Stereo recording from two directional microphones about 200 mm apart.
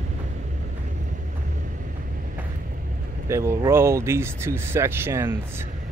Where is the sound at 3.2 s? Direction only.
15° right (ahead or behind).